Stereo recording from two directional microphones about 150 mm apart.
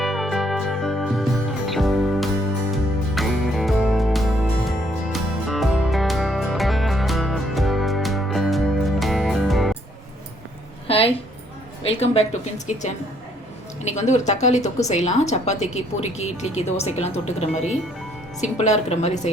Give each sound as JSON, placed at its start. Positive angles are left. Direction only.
{"t": 0.0, "sound": "music", "side_deg": 0}
{"t": 10.8, "sound": "a sound", "side_deg": 40}
{"t": 11.9, "sound": "a woman's voice", "side_deg": 45}